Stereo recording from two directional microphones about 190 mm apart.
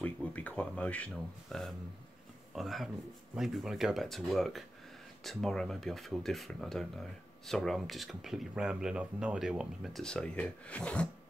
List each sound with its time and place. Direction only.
0.0 s speech: 5° left (ahead or behind)